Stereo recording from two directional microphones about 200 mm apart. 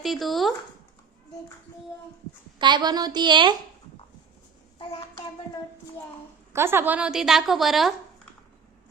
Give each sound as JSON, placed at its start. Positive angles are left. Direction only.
{"t": 0.0, "sound": "speech", "side_deg": 0}
{"t": 2.6, "sound": "a woman's voice", "side_deg": -20}
{"t": 4.8, "sound": "a child's voice", "side_deg": 25}
{"t": 6.5, "sound": "speech", "side_deg": -10}